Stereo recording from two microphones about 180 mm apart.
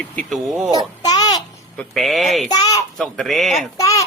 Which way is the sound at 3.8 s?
20° left (ahead or behind).